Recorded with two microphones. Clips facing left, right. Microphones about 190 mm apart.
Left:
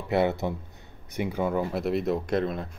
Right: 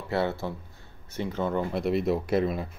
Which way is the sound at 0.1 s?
20° left (ahead or behind).